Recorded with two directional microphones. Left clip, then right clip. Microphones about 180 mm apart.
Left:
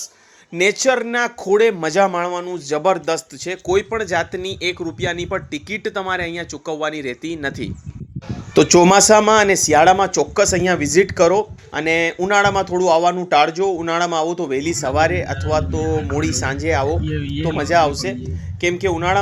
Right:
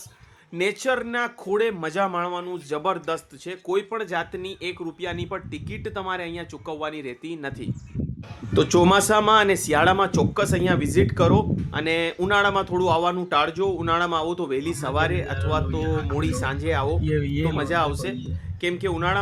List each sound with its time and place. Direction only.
0.5 s speech: 15° left (ahead or behind)